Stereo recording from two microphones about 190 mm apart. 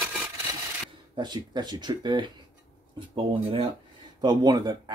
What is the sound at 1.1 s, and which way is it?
Speech, 20° right (ahead or behind).